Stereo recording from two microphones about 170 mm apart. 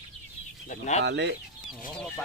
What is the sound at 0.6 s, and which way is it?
Speech, 45° left (ahead or behind).